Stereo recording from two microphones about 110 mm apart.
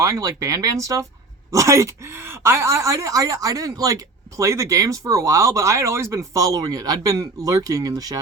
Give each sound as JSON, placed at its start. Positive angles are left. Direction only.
{"t": 0.0, "sound": "speech", "side_deg": -30}